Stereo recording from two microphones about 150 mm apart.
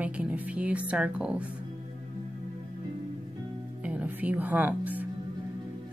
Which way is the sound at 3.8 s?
10° right (ahead or behind).